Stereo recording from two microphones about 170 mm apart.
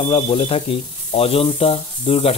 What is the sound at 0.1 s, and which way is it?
Speech, 35° left (ahead or behind).